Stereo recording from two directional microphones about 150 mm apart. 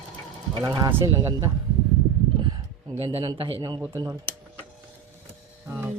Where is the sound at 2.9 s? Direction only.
35° right (ahead or behind).